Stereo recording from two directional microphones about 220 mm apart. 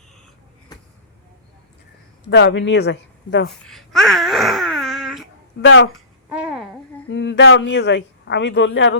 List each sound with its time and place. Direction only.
2.3 s speech: 55° left (ahead or behind)
3.7 s wail: centre (ahead or behind)
5.6 s a man's voice: 60° left (ahead or behind)
6.2 s babbling: 5° right (ahead or behind)
7.1 s a man's voice: 55° left (ahead or behind)